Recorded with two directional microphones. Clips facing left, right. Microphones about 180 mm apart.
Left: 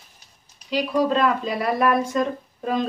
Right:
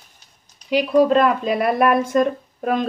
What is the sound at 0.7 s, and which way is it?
Speech, 55° right (ahead or behind).